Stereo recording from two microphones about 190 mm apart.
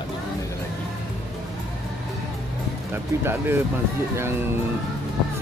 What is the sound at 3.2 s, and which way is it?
Speech, 10° right (ahead or behind).